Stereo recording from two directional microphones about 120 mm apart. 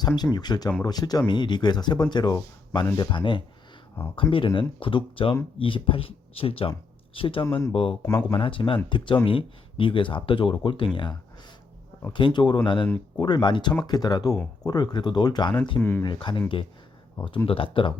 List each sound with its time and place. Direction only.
0.3 s speech: 35° left (ahead or behind)
15.8 s speech: 20° left (ahead or behind)
16.0 s speech: 40° left (ahead or behind)